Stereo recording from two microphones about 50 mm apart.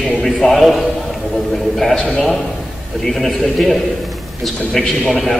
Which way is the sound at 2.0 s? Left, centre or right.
Left.